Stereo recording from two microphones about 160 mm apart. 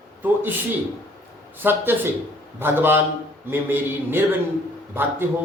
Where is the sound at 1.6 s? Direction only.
15° right (ahead or behind).